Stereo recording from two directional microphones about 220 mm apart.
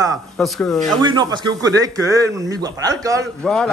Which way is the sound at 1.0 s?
20° right (ahead or behind).